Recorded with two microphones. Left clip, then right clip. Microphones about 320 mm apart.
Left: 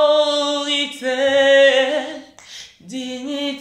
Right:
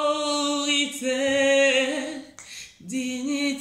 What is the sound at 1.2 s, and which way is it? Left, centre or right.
Music, centre.